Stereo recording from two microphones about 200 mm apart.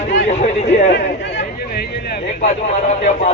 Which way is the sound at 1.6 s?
50° left (ahead or behind).